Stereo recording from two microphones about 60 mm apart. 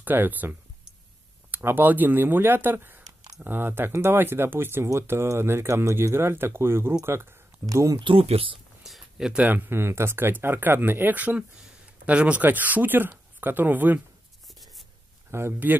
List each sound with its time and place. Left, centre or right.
0.0 s speech: right
7.6 s speech: right
8.8 s a sound: centre
9.4 s speech: right
15.3 s speech: right